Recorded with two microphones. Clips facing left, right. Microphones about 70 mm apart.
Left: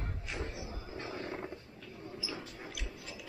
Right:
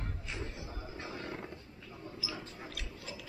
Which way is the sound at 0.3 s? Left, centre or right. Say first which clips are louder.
Left 3 dB; centre.